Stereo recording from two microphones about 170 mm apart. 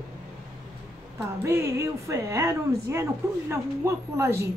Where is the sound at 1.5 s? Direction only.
15° right (ahead or behind).